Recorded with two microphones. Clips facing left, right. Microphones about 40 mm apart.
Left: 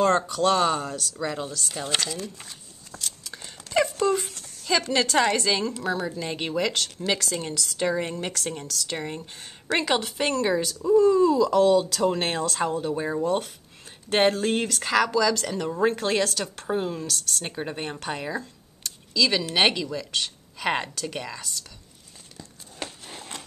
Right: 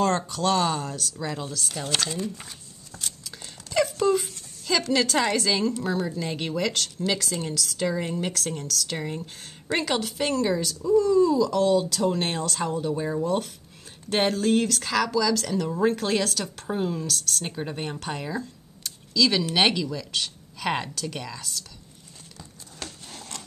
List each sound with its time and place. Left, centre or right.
0.0 s speech: centre
2.0 s speech: centre
2.9 s a sound: centre
3.3 s dog: centre
3.7 s a sound: centre
4.6 s speech: centre
7.4 s speech: left
8.0 s speech: centre
22.8 s a sound: centre